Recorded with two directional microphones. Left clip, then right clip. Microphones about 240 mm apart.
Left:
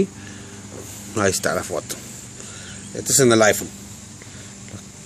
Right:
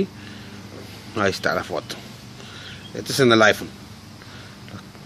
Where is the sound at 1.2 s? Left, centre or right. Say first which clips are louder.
Left 1 dB; centre.